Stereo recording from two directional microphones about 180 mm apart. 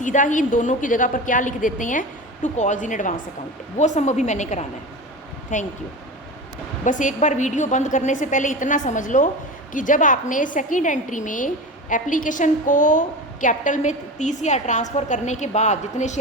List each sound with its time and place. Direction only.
0.0 s a woman's voice: 45° left (ahead or behind)
6.8 s a woman's voice: 45° left (ahead or behind)